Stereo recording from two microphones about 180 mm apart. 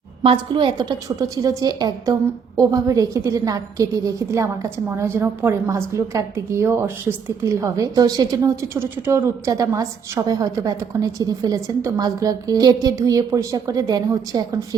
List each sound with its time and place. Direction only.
0.5 s a woman's voice: 25° right (ahead or behind)